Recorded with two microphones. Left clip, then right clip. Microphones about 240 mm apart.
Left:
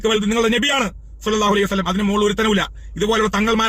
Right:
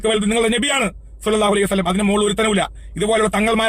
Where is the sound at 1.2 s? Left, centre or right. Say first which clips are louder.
Right 1 dB; centre.